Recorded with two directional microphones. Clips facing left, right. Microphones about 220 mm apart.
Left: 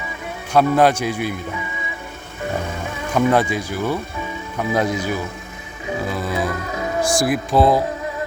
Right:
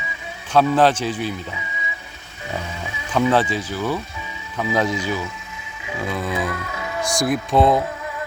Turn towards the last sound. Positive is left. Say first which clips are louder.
# left 1 dB
turn(degrees=0)  # may be behind; listen again after turning